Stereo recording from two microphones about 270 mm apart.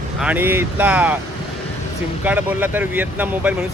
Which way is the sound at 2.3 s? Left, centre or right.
Centre.